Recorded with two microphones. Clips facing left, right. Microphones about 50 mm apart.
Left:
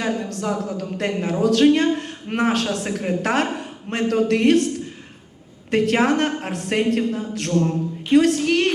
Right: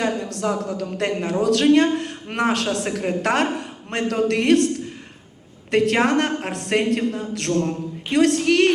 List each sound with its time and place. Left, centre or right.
0.2 s a woman's voice: right
5.7 s a woman's voice: right